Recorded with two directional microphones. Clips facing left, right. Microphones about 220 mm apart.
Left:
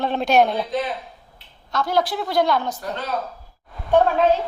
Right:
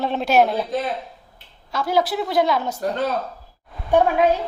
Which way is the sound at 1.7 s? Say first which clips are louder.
Right 1 dB; 5° right (ahead or behind).